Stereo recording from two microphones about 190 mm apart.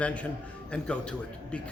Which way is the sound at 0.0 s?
5° left (ahead or behind).